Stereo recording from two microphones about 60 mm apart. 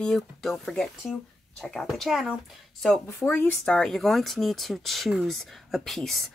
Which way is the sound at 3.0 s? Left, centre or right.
Left.